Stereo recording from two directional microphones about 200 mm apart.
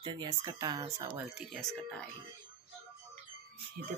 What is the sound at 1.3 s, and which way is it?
Speech, centre (ahead or behind).